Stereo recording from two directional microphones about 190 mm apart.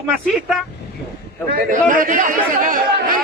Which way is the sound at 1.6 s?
45° right (ahead or behind).